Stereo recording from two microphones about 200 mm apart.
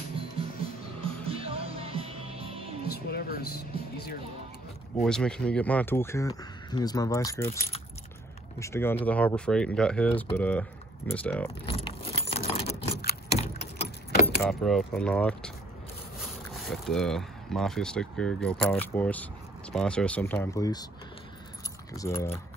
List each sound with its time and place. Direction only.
1.0 s music: 30° right (ahead or behind)
2.9 s a sound: 50° left (ahead or behind)
5.0 s speech: 5° left (ahead or behind)
8.5 s speech: 15° left (ahead or behind)
11.6 s keys jangling: 25° left (ahead or behind)
13.3 s vehicle: 30° left (ahead or behind)
14.2 s speech: centre (ahead or behind); by 20.8 s 15° left (ahead or behind)
21.9 s speech: 15° left (ahead or behind)